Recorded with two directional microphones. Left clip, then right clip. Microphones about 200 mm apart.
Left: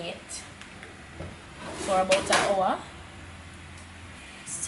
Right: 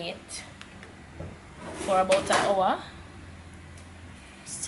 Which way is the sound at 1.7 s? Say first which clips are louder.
Right 1 dB; 15° right (ahead or behind).